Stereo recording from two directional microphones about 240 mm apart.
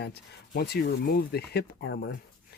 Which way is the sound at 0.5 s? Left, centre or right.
Left.